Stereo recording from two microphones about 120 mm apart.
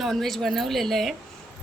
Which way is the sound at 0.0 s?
Centre (ahead or behind).